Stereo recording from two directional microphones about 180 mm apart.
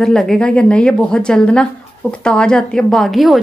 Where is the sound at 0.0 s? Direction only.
Centre (ahead or behind).